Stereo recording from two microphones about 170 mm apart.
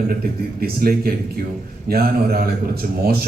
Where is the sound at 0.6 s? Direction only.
60° right (ahead or behind).